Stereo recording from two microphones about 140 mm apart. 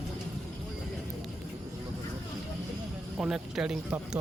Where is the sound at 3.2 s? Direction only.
5° right (ahead or behind).